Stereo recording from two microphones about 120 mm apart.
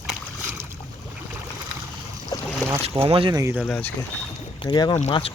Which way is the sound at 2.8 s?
50° right (ahead or behind).